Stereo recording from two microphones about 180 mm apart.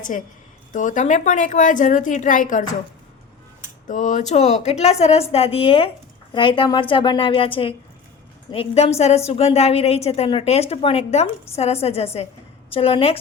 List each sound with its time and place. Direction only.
0.0 s a woman's voice: 45° left (ahead or behind)
3.8 s a woman's voice: 45° left (ahead or behind)